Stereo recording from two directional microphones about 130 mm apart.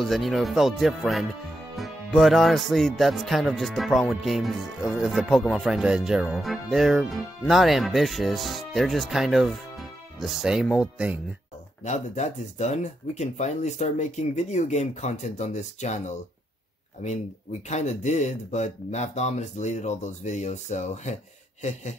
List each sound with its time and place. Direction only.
0.0 s speech: centre (ahead or behind)
11.8 s speech: 60° left (ahead or behind)
17.6 s speech: 60° left (ahead or behind)